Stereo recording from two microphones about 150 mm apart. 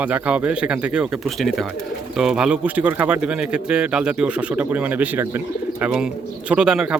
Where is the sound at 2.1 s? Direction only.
5° right (ahead or behind).